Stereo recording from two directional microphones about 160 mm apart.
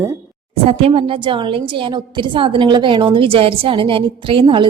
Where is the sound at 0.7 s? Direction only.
35° right (ahead or behind).